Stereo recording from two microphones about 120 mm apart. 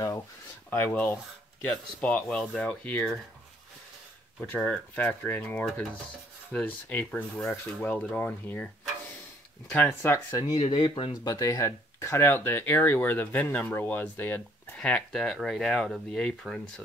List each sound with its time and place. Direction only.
0.7 s speech: 15° left (ahead or behind)
4.4 s speech: 5° left (ahead or behind)
9.8 s speech: 25° left (ahead or behind)
10.4 s speech: 40° left (ahead or behind)
11.3 s speech: 30° left (ahead or behind); by 16.8 s 5° left (ahead or behind)